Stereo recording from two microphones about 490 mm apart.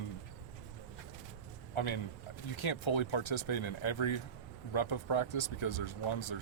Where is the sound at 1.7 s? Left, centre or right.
Left.